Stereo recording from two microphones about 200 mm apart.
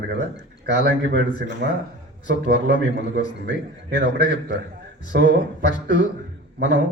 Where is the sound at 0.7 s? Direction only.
40° left (ahead or behind).